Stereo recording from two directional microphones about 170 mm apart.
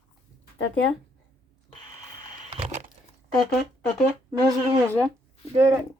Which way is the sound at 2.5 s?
40° right (ahead or behind).